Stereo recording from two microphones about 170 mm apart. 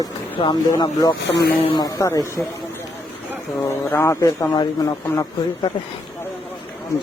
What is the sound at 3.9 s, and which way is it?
Speech, 15° left (ahead or behind).